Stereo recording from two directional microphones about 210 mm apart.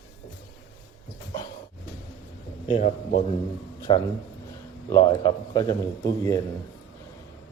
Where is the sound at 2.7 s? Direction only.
30° left (ahead or behind); by 6.4 s 15° left (ahead or behind).